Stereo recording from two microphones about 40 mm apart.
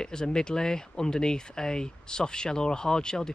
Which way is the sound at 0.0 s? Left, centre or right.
Centre.